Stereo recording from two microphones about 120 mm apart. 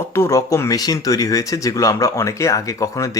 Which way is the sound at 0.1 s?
25° left (ahead or behind).